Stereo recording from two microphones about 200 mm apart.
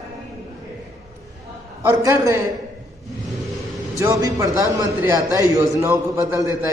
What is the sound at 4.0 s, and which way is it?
A man's voice, 15° right (ahead or behind).